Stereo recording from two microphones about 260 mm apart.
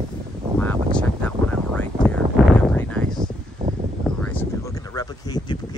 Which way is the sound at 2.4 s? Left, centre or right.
Centre.